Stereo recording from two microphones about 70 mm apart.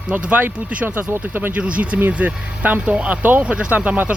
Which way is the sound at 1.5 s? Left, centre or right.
Centre.